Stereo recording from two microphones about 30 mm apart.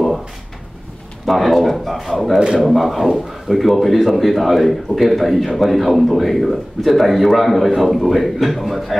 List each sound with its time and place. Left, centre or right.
1.2 s a man's voice: centre
2.3 s speech: right
2.6 s a man's voice: centre